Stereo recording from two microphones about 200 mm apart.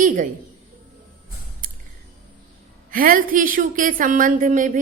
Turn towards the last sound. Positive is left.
turn(degrees=-40)  # may be behind; listen again after turning